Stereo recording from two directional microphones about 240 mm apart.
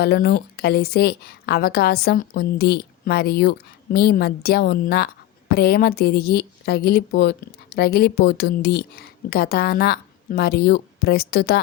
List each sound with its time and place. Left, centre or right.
0.0 s a woman's voice: left